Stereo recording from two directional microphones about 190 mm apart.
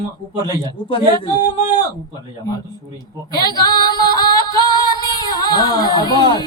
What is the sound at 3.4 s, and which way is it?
Female singing, 20° left (ahead or behind).